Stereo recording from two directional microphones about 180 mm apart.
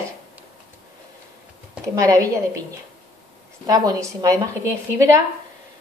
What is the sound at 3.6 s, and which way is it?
A woman's voice, 20° right (ahead or behind).